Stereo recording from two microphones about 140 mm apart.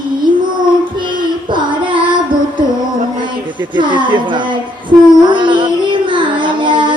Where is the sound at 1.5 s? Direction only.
35° right (ahead or behind).